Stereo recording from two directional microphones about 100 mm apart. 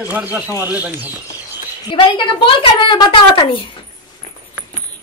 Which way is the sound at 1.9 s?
60° left (ahead or behind).